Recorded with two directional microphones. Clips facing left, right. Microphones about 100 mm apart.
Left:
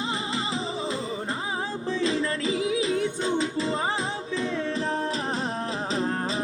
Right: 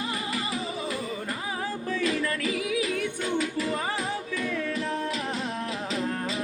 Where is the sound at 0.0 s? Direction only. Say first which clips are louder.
Left 2 dB; 25° left (ahead or behind).